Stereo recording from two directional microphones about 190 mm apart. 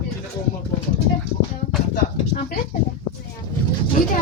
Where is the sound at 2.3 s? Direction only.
45° left (ahead or behind).